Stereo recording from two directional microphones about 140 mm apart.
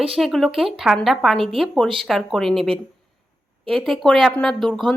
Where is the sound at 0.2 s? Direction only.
Centre (ahead or behind).